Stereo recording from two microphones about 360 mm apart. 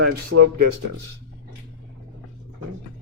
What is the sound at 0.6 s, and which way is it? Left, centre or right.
Speech, right.